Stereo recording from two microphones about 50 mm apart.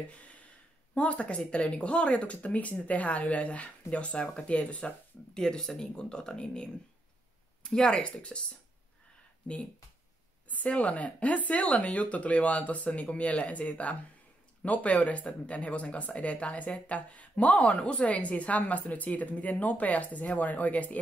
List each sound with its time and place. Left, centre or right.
0.9 s speech: left
5.4 s speech: centre
10.5 s speech: left